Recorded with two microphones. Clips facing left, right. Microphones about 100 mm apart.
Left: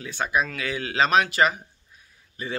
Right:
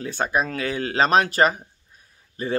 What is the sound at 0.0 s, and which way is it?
Speech, 40° right (ahead or behind).